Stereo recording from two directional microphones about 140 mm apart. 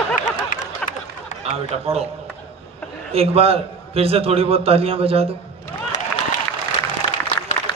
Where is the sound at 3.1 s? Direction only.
45° right (ahead or behind).